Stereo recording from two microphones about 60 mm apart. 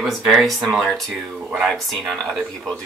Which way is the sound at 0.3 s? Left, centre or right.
Centre.